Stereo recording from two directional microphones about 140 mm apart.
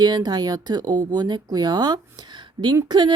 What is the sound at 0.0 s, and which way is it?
A woman's voice, 30° right (ahead or behind).